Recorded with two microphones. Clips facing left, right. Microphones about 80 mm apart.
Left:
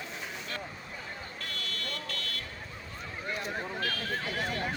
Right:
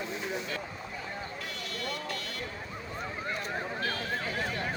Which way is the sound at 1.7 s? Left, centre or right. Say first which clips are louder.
Right 3 dB; centre.